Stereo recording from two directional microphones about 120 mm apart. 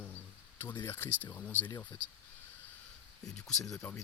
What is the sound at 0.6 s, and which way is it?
Speech, 20° left (ahead or behind).